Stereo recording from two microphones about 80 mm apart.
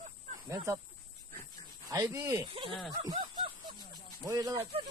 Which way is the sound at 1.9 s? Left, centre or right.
Right.